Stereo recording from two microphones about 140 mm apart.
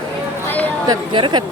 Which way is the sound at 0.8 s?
35° right (ahead or behind).